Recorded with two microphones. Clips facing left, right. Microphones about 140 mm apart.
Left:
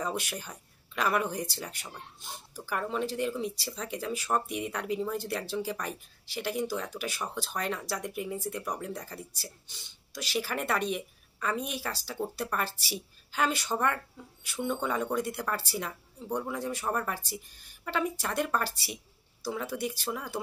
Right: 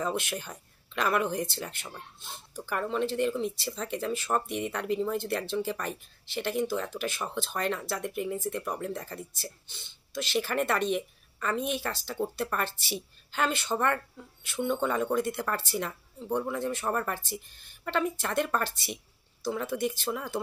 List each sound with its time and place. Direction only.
0.1 s speech: 5° left (ahead or behind)
16.3 s speech: 5° right (ahead or behind)
16.5 s speech: 5° left (ahead or behind)